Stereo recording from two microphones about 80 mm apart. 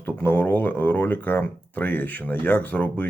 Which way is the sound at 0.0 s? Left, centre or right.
Left.